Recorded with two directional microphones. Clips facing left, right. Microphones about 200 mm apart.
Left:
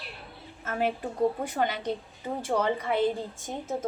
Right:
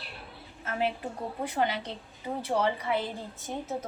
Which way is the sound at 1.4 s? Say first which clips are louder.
Left 1 dB; 45° left (ahead or behind).